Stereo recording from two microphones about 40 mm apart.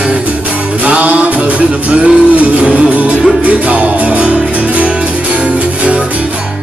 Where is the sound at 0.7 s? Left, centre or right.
Right.